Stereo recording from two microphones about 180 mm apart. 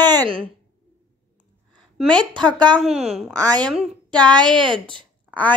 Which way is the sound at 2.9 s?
35° right (ahead or behind).